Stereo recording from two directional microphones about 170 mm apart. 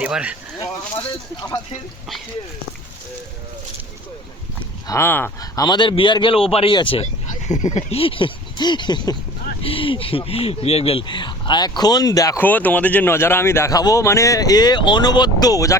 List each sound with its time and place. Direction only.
0.0 s speech: 5° right (ahead or behind)
4.9 s speech: 15° left (ahead or behind)